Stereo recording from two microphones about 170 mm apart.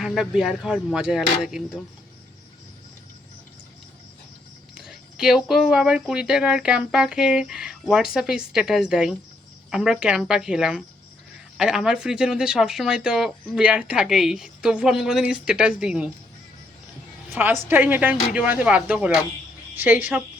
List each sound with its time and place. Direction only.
0.0 s speech: centre (ahead or behind)
4.7 s speech: 5° right (ahead or behind)
17.3 s a woman's voice: 10° right (ahead or behind)